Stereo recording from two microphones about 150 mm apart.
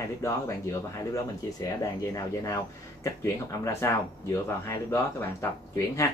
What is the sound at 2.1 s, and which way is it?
Speech, 20° left (ahead or behind).